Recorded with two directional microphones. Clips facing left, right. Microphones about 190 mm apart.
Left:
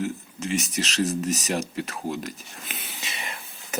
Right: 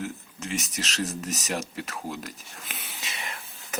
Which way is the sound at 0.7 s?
Centre (ahead or behind).